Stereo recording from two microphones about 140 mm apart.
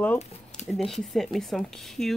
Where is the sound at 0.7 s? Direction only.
Centre (ahead or behind).